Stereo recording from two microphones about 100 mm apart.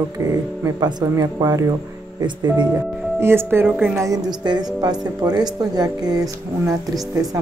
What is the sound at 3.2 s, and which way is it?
Speech, 25° right (ahead or behind).